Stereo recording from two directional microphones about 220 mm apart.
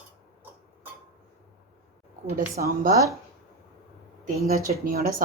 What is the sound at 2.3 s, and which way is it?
Speech, 40° right (ahead or behind).